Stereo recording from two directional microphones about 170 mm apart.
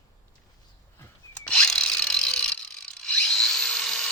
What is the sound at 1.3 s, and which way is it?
Ratchet, 5° left (ahead or behind).